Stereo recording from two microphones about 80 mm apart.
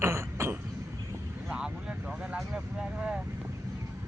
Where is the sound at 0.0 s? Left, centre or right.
Right.